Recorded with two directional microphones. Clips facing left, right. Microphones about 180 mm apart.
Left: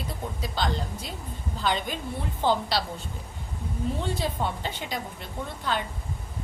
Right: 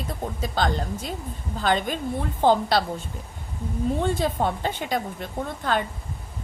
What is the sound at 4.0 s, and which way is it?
A woman's voice, 50° right (ahead or behind).